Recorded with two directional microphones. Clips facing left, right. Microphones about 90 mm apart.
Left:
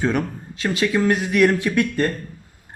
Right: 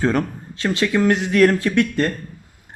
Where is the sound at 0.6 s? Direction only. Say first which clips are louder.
Right 1 dB; 20° left (ahead or behind).